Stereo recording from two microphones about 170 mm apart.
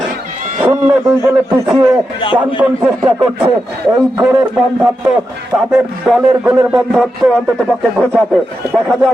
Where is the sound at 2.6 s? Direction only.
5° right (ahead or behind).